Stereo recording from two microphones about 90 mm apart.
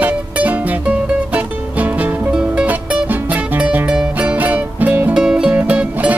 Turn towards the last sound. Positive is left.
turn(degrees=-15)  # may be behind; listen again after turning